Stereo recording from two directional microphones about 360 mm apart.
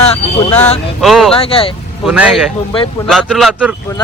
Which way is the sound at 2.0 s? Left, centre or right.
Centre.